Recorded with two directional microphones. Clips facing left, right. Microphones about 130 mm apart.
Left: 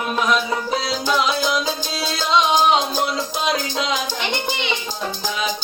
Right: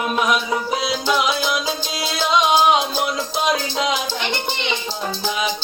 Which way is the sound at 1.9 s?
15° right (ahead or behind).